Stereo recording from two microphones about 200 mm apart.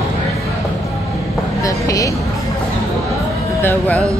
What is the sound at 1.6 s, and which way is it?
Vehicle, 15° left (ahead or behind).